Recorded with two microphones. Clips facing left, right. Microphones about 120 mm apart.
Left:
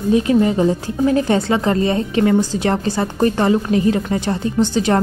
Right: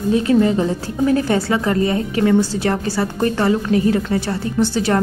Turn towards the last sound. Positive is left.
turn(degrees=20)  # may be behind; listen again after turning